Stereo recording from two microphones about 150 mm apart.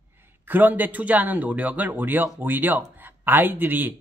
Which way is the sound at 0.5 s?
10° right (ahead or behind).